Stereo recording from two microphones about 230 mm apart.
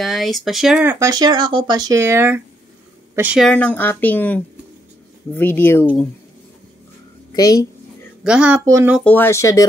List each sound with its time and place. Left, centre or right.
0.0 s speech: centre
7.3 s speech: centre
8.2 s speech: centre
8.9 s speech: centre